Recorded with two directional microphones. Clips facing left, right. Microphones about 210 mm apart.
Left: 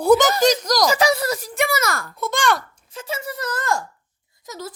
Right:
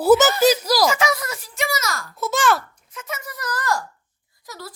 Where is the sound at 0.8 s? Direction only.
35° left (ahead or behind).